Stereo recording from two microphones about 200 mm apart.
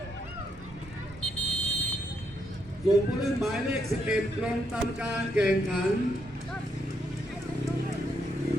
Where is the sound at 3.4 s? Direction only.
5° right (ahead or behind).